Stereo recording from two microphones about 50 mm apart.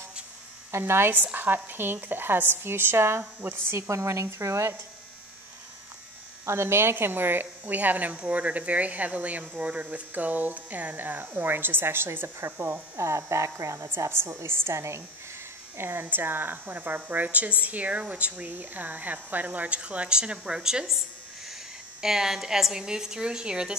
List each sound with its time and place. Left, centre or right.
0.7 s speech: right
1.1 s a woman's voice: right
3.8 s speech: right
6.4 s speech: right
12.9 s speech: right
14.0 s a woman's voice: right
15.8 s speech: right; by 20.8 s centre
22.0 s a woman's voice: centre